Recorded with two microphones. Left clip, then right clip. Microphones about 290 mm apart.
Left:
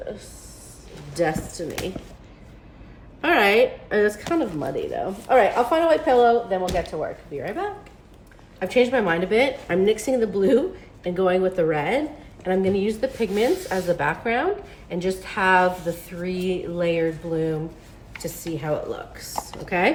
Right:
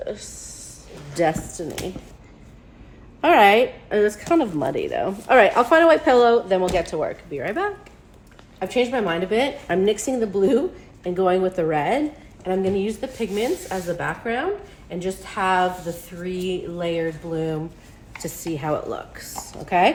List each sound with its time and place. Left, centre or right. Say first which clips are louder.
1.1 s speech: right 2 dB; centre
3.2 s a woman's voice: right 3 dB; centre
8.5 s a woman's voice: left 2 dB; centre
19.4 s speech: right 4 dB; centre